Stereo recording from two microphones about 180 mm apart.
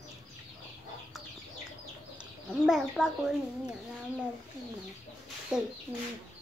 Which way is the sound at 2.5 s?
5° right (ahead or behind).